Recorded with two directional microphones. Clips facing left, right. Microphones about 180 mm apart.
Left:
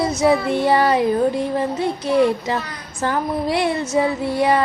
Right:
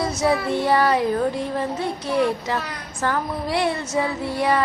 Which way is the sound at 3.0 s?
20° left (ahead or behind).